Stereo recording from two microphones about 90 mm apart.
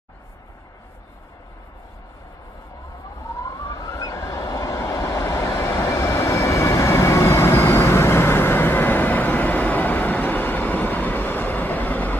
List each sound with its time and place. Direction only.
3.3 s train: 40° left (ahead or behind)
5.7 s vehicle: 30° left (ahead or behind)